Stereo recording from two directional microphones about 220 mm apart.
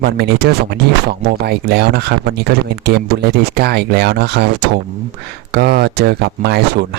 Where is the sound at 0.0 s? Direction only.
45° right (ahead or behind).